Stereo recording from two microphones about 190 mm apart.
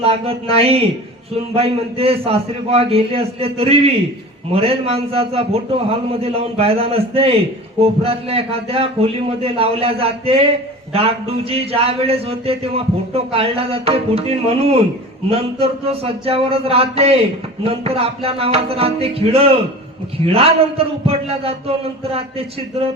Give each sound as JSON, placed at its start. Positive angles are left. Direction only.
{"t": 0.0, "sound": "a man's voice", "side_deg": -30}